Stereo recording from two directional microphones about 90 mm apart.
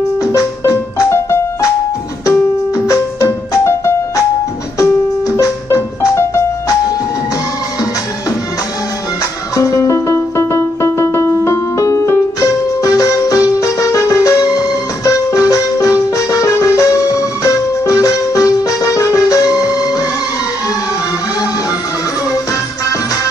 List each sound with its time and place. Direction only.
0.2 s music: 40° left (ahead or behind)
2.9 s music: 40° left (ahead or behind)
5.3 s music: 35° left (ahead or behind)
9.6 s music: 40° left (ahead or behind)